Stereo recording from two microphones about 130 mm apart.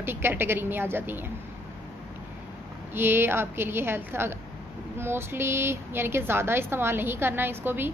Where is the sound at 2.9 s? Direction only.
15° right (ahead or behind).